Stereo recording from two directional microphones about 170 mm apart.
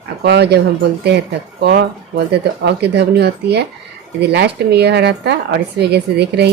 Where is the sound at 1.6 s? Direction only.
75° right (ahead or behind).